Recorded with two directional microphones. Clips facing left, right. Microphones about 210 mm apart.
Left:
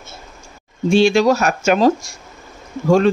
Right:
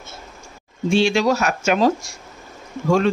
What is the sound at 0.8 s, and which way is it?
Speech, 40° left (ahead or behind).